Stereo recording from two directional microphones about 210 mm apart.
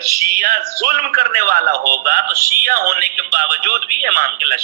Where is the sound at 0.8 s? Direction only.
45° right (ahead or behind).